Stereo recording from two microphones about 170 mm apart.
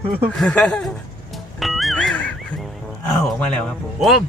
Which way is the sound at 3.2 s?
5° left (ahead or behind).